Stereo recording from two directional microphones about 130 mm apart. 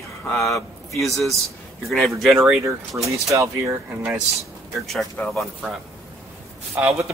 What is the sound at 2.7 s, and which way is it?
Speech, 25° right (ahead or behind).